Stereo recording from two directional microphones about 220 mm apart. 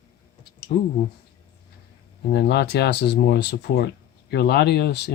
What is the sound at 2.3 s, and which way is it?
Speech, 50° left (ahead or behind).